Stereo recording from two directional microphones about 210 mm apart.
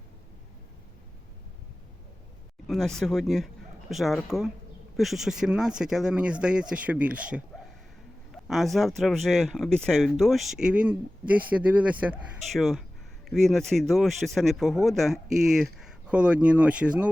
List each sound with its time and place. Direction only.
2.6 s speech: centre (ahead or behind)